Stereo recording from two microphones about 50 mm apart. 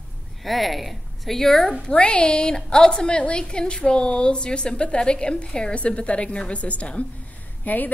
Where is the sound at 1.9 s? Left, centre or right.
Left.